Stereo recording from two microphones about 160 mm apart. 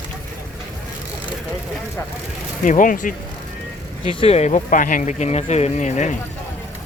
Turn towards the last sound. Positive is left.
turn(degrees=50)  # may be behind; listen again after turning